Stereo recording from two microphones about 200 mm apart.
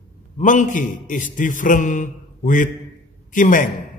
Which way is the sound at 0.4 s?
40° left (ahead or behind).